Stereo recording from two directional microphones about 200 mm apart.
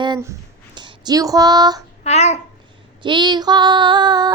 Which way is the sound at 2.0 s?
35° left (ahead or behind).